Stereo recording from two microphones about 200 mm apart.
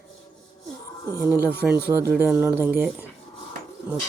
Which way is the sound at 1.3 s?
10° right (ahead or behind).